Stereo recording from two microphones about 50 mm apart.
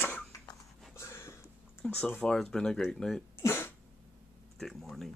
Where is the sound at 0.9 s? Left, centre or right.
Left.